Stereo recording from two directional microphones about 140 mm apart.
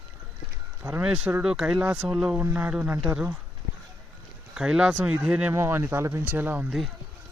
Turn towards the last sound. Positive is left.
turn(degrees=0)  # may be behind; listen again after turning